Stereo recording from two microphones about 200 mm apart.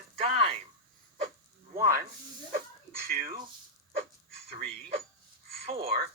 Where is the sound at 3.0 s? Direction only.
45° right (ahead or behind).